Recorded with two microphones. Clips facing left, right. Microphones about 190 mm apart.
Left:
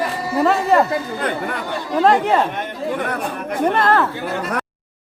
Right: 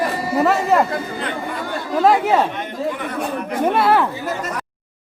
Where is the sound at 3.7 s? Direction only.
10° right (ahead or behind).